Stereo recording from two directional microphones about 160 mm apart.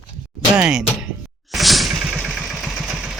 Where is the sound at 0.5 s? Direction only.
5° right (ahead or behind).